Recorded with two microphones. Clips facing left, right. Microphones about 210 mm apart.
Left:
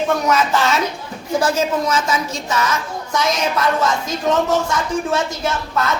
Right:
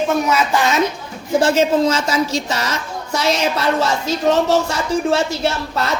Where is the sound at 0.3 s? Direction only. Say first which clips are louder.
Even; 10° right (ahead or behind).